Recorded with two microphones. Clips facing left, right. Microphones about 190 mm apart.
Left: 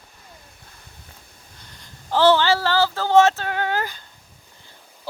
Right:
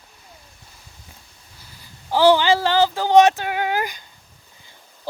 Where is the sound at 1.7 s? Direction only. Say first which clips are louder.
Right 1 dB; 10° right (ahead or behind).